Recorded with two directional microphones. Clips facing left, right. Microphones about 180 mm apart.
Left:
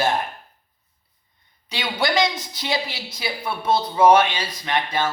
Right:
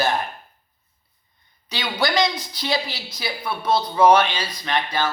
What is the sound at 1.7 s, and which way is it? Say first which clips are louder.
A man's voice: even; 25° left (ahead or behind).